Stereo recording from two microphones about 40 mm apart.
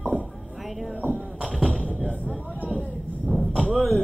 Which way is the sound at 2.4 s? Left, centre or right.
Left.